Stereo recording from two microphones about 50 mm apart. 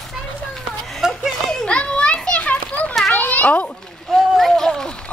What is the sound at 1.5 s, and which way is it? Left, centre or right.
Children playing, centre.